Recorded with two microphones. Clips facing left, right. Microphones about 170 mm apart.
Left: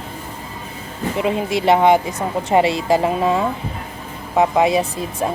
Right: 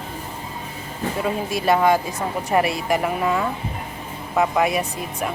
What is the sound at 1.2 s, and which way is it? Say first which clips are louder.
A woman's voice: left 5 dB; 25° left (ahead or behind).